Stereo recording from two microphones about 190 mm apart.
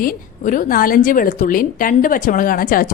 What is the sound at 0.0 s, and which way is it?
A woman's voice, 45° left (ahead or behind).